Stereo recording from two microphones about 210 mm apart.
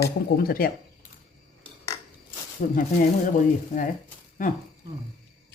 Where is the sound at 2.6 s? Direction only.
40° left (ahead or behind).